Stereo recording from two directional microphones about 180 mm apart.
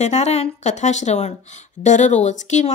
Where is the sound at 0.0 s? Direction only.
40° left (ahead or behind).